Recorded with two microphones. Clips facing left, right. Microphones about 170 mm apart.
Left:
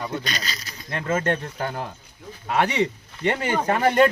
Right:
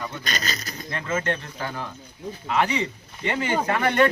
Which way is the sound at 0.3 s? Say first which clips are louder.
Right 2 dB; 45° right (ahead or behind).